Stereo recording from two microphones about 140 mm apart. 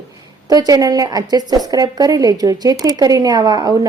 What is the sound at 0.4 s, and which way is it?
A woman's voice, 25° right (ahead or behind).